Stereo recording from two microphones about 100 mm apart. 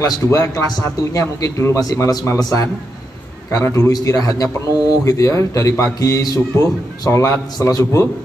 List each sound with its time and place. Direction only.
0.0 s a man's voice: 30° left (ahead or behind)